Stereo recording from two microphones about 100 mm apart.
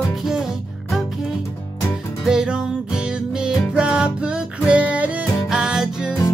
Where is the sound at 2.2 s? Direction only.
10° right (ahead or behind).